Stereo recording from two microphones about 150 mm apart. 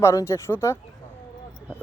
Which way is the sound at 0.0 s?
20° left (ahead or behind).